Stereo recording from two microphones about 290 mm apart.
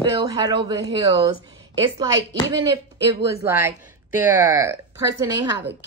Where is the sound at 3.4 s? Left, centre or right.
Centre.